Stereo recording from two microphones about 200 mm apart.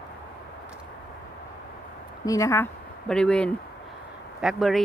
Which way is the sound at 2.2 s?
15° left (ahead or behind).